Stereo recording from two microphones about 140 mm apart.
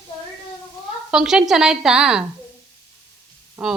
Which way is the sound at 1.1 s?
5° right (ahead or behind).